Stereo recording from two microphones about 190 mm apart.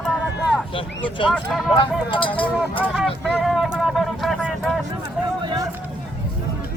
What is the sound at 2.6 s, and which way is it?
Vehicle, 5° right (ahead or behind).